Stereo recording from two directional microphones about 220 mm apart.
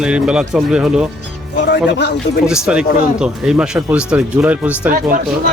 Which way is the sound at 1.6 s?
50° left (ahead or behind).